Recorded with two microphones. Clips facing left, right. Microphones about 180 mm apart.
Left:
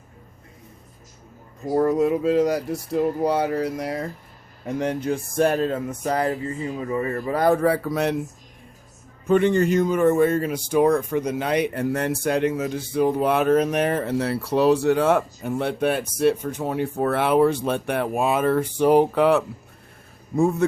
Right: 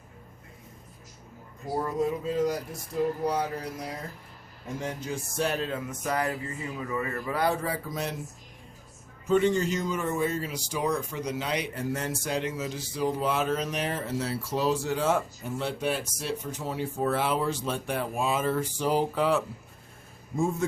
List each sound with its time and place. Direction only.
1.7 s speech: 75° left (ahead or behind)
9.2 s speech: 60° left (ahead or behind)